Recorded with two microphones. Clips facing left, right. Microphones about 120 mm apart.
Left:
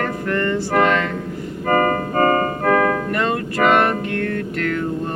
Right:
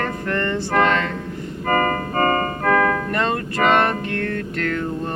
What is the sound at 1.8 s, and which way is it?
Keyboard, 40° right (ahead or behind).